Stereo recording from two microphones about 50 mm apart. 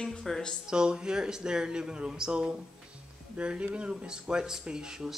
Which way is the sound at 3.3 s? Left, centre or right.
Right.